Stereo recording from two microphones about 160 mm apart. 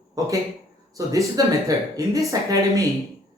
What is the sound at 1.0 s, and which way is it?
Speech, 20° right (ahead or behind).